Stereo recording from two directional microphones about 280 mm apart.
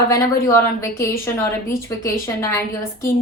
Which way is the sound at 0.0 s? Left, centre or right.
Centre.